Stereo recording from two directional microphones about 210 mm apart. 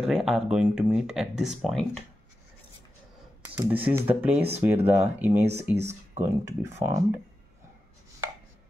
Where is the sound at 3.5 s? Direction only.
10° right (ahead or behind).